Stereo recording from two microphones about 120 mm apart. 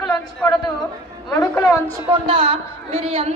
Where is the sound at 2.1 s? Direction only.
50° right (ahead or behind).